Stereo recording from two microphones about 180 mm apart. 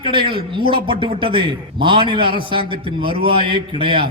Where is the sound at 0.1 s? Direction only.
30° right (ahead or behind).